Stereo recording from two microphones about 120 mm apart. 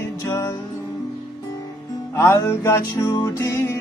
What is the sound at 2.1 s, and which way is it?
Music, 20° left (ahead or behind).